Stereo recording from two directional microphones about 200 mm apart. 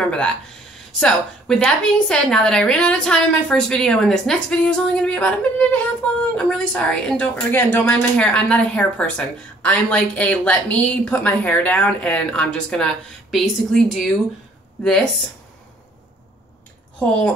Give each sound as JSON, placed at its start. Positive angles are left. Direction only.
{"t": 0.9, "sound": "a woman's voice", "side_deg": 5}